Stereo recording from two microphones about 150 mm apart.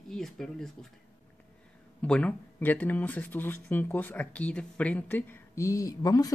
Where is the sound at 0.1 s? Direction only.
5° left (ahead or behind).